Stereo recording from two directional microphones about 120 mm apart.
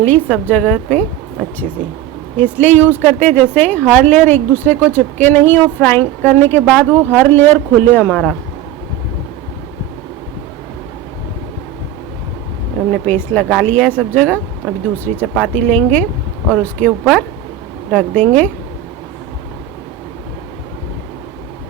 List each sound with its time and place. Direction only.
0.0 s speech: 10° left (ahead or behind)
12.9 s speech: 15° left (ahead or behind)